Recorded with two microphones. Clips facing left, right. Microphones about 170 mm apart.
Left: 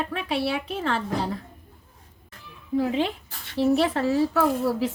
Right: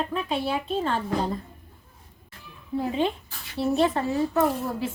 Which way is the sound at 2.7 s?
90° left.